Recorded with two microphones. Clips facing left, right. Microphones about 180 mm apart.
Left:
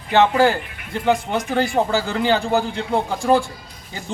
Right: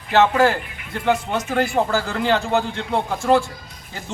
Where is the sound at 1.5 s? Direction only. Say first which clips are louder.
Even; centre (ahead or behind).